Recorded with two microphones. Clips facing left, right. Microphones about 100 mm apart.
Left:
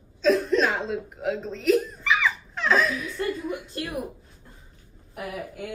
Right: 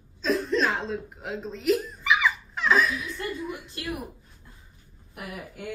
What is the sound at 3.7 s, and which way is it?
Speech, 35° left (ahead or behind).